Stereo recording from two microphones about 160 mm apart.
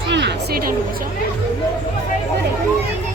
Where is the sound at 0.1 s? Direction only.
90° right.